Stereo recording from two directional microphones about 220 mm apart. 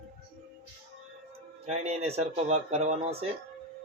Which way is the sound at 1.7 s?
30° right (ahead or behind).